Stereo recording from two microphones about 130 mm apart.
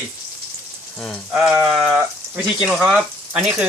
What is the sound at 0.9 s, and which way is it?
Frying, 5° left (ahead or behind).